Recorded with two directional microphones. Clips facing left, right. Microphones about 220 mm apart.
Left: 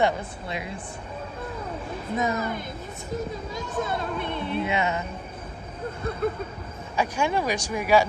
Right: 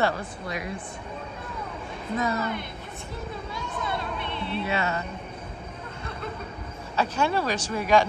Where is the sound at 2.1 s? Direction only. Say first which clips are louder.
Left 1 dB; 20° left (ahead or behind).